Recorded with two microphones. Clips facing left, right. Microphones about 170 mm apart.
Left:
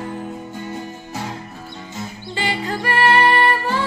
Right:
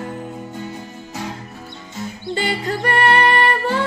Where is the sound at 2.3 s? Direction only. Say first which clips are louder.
Right 2 dB; 40° right (ahead or behind).